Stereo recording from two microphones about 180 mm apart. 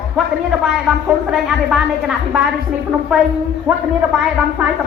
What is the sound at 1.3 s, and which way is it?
A man's voice, 5° right (ahead or behind).